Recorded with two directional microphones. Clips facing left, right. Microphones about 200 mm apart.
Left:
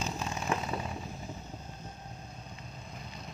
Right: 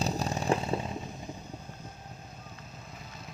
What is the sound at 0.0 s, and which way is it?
Chainsaw, 35° right (ahead or behind).